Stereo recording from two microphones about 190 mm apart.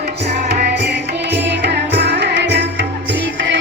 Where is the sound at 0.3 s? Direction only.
50° right (ahead or behind).